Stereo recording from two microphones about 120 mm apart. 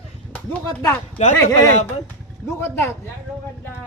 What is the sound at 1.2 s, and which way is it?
Speech, 65° left (ahead or behind).